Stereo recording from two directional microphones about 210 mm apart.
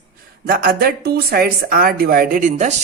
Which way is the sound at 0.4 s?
45° right (ahead or behind).